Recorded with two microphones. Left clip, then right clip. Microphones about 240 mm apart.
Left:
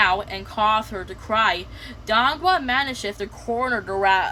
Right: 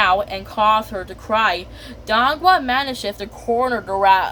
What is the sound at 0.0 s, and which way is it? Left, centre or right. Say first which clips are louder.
Speech: right 3 dB; centre.